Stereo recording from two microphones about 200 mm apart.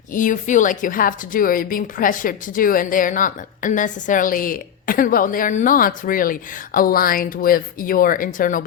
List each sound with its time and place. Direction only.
0.1 s a woman's voice: 40° left (ahead or behind)